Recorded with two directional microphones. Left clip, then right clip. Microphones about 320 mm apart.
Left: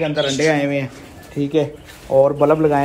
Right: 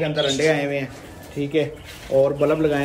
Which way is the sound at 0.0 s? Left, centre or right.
Centre.